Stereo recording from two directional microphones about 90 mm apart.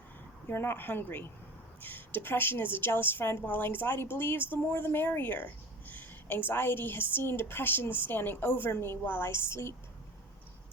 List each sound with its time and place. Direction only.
0.4 s a woman's voice: 25° left (ahead or behind)